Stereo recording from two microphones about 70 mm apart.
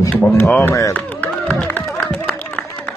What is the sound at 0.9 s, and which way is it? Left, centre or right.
Music, left.